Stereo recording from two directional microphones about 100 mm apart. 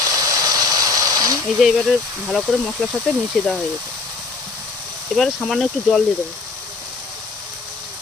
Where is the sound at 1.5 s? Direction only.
5° right (ahead or behind).